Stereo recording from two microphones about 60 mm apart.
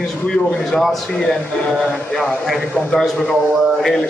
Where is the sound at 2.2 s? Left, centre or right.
Centre.